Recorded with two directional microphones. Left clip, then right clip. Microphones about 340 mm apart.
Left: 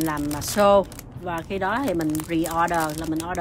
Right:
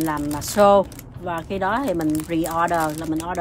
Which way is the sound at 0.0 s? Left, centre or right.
Centre.